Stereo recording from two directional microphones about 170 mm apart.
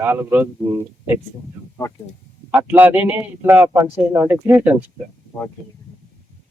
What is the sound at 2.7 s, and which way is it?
Speech, 10° right (ahead or behind).